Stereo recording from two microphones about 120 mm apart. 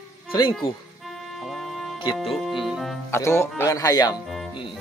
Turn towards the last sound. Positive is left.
turn(degrees=0)  # may be behind; listen again after turning